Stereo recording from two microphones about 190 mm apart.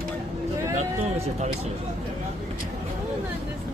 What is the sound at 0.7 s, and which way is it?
Speech, 35° right (ahead or behind).